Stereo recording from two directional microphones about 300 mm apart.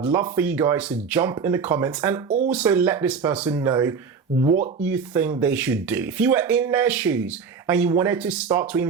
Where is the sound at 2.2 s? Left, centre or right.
Right.